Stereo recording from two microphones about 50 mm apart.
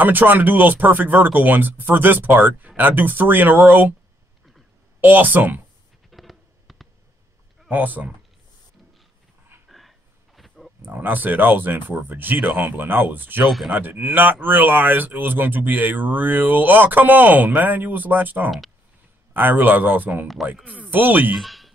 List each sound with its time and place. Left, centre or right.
0.0 s speech: right
5.0 s speech: right
6.0 s fireworks: centre
7.7 s speech: right
9.7 s a sound: centre
10.9 s speech: right
21.4 s a sound: centre